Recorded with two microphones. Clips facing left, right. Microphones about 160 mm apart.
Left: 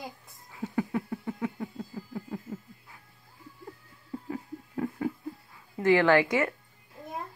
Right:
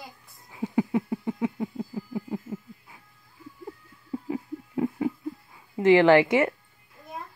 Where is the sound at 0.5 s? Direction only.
15° right (ahead or behind).